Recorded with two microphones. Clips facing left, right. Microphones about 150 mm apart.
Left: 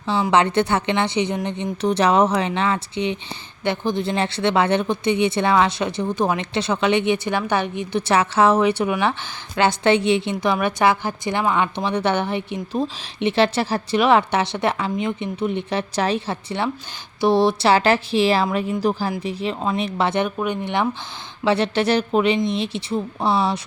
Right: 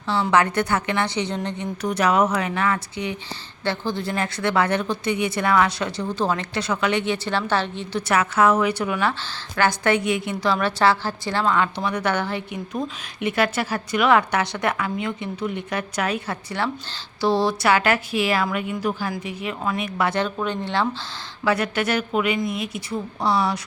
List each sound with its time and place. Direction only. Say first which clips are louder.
0.1 s a woman's voice: left 2 dB; 20° left (ahead or behind)
8.0 s a woman's voice: left 2 dB; 30° left (ahead or behind)
21.4 s a woman's voice: left 3 dB; 30° left (ahead or behind)